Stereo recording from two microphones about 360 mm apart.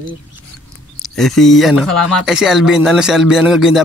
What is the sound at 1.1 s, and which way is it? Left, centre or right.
Speech, centre.